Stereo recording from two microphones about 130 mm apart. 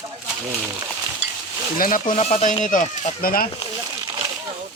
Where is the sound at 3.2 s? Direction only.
90° left.